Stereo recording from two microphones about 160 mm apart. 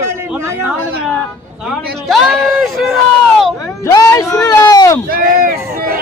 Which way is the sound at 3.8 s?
20° left (ahead or behind).